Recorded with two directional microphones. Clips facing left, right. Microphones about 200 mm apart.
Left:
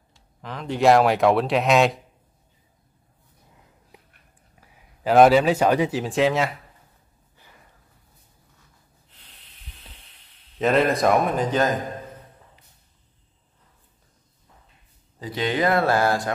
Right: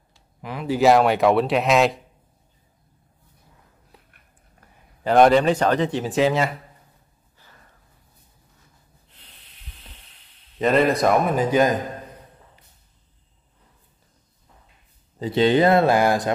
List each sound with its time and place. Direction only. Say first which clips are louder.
0.4 s speech: right 3 dB; 10° right (ahead or behind)
3.9 s a sound: left 2 dB; 15° left (ahead or behind)
4.6 s speech: right 1 dB; 5° left (ahead or behind)
7.3 s snort: even; 15° left (ahead or behind)
10.6 s speech: right 1 dB; centre (ahead or behind)
15.1 s speech: right 7 dB; 25° right (ahead or behind)